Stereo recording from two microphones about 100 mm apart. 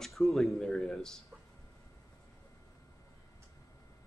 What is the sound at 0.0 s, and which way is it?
Speech, centre (ahead or behind).